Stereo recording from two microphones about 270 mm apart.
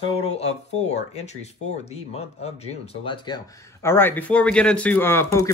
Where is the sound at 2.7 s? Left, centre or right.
Centre.